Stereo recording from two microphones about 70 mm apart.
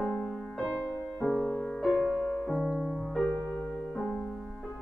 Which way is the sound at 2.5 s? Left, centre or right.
Centre.